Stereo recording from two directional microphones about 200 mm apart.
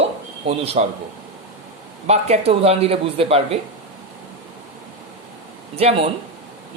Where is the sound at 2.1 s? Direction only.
30° right (ahead or behind).